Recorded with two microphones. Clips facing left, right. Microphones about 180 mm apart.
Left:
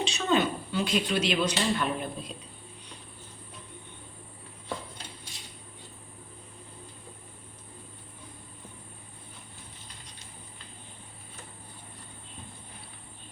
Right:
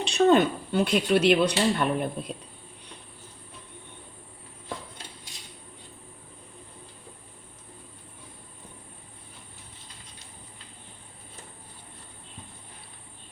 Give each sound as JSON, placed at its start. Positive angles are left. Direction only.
{"t": 0.0, "sound": "speech", "side_deg": -55}